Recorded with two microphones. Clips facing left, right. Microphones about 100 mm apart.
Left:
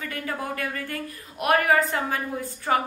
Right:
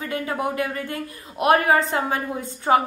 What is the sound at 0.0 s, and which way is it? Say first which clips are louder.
A woman's voice: right 6 dB; 25° right (ahead or behind).